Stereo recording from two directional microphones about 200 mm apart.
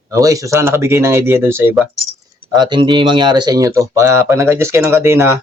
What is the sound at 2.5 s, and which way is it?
Speech, 25° right (ahead or behind).